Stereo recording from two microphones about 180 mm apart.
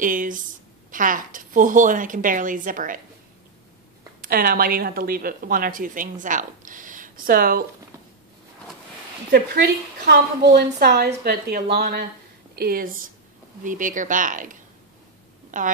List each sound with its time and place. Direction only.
0.0 s a woman's voice: 50° right (ahead or behind)
4.2 s a woman's voice: 55° right (ahead or behind)
10.0 s a woman's voice: 65° right (ahead or behind); by 15.7 s 45° right (ahead or behind)